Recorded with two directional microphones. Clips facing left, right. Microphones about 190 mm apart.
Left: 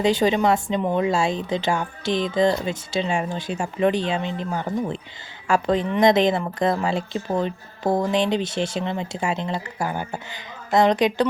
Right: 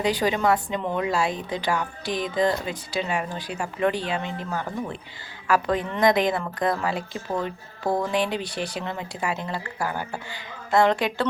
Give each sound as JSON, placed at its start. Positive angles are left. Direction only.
{"t": 0.0, "sound": "a woman's voice", "side_deg": 25}